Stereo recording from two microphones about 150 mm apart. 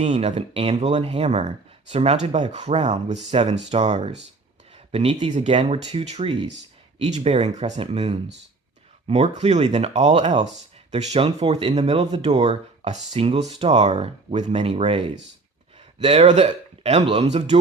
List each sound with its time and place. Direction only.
0.0 s speech: 50° right (ahead or behind)